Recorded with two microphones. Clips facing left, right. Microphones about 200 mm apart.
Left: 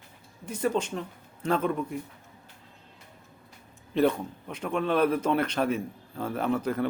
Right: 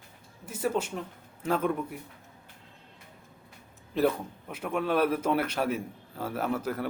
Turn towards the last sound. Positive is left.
turn(degrees=-5)  # may be behind; listen again after turning